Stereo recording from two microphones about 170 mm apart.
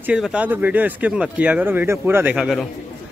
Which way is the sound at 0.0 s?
5° right (ahead or behind).